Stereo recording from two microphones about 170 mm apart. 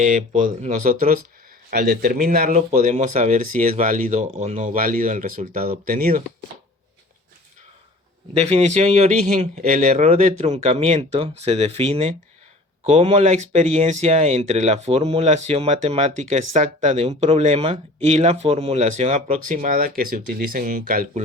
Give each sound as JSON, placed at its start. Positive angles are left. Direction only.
{"t": 0.0, "sound": "speech", "side_deg": -50}
{"t": 8.4, "sound": "speech", "side_deg": -40}